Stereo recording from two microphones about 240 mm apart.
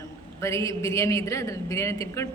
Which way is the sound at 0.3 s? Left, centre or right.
Centre.